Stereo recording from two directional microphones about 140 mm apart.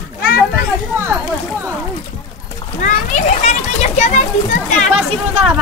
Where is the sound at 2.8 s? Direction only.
60° left (ahead or behind).